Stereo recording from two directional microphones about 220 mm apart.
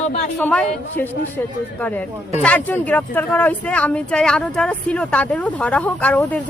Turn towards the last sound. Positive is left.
turn(degrees=5)  # may be behind; listen again after turning